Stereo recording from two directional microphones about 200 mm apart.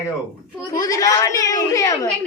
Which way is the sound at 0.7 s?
15° left (ahead or behind).